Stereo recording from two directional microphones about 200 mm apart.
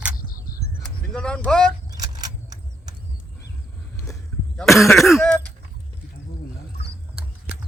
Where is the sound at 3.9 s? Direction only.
15° left (ahead or behind).